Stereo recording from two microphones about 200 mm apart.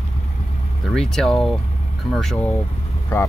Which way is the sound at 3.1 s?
15° left (ahead or behind).